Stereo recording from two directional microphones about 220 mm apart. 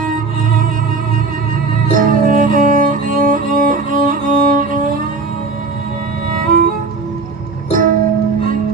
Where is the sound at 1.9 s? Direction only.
40° right (ahead or behind).